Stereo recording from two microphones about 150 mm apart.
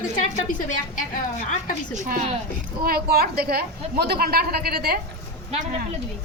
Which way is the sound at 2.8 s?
90° right.